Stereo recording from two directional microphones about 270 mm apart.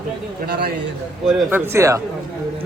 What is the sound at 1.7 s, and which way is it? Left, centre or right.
Speech, centre.